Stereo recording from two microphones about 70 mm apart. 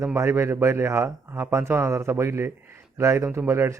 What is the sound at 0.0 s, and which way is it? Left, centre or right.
Speech, right.